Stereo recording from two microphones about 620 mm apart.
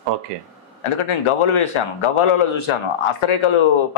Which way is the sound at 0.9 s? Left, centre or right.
Left.